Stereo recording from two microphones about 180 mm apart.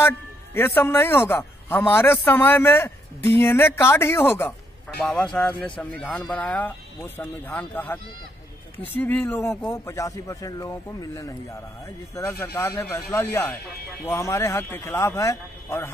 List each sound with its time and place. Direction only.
0.6 s speech: 10° left (ahead or behind)